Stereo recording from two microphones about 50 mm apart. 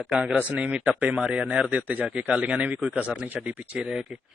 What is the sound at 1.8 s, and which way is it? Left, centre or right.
Speech, right.